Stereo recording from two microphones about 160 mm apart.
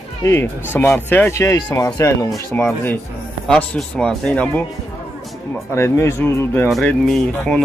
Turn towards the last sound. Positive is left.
turn(degrees=5)  # may be behind; listen again after turning